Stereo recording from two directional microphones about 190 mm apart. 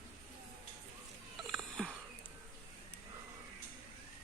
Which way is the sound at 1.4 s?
Centre (ahead or behind).